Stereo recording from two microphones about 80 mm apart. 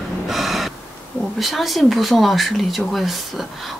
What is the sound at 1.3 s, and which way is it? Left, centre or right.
Speech, centre.